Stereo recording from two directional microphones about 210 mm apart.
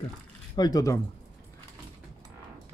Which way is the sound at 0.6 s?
15° left (ahead or behind).